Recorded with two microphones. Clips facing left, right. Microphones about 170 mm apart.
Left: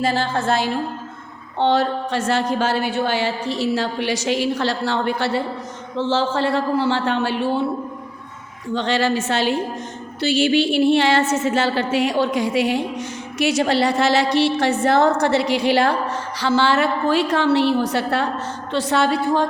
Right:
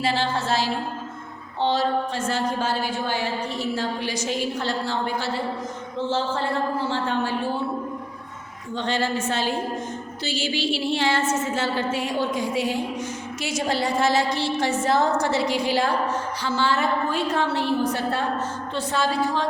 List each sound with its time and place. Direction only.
0.0 s a woman's voice: 45° left (ahead or behind); by 5.4 s 70° left (ahead or behind)
6.0 s a woman's voice: 90° left; by 7.6 s 75° left (ahead or behind)
8.7 s a woman's voice: 90° left
10.2 s a woman's voice: 60° left (ahead or behind)
16.4 s a woman's voice: 80° left; by 19.5 s 55° left (ahead or behind)